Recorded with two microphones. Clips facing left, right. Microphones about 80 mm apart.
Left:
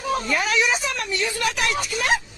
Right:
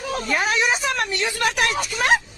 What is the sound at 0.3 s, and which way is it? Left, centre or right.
A woman's voice, right.